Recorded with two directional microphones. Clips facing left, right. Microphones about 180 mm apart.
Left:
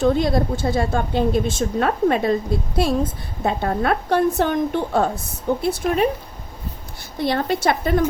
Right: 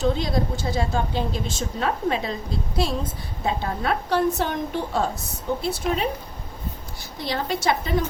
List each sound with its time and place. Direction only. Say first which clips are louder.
0.0 s a woman's voice: left 5 dB; 55° left (ahead or behind)
7.2 s a woman's voice: left 6 dB; 55° left (ahead or behind)